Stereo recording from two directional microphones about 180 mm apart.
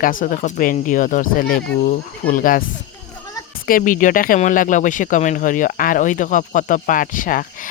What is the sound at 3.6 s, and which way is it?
Speech, 50° left (ahead or behind).